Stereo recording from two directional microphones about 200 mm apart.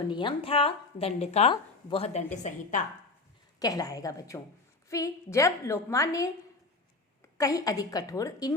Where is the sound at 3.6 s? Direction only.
20° left (ahead or behind).